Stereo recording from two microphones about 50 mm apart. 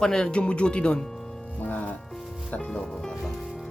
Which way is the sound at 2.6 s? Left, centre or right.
Centre.